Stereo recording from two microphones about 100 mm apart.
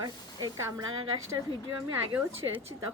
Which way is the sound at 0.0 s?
45° right (ahead or behind).